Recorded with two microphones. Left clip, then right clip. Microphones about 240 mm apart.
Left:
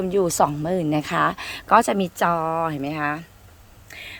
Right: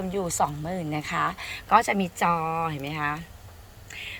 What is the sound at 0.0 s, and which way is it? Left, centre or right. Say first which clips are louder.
Speech: left 7 dB; left.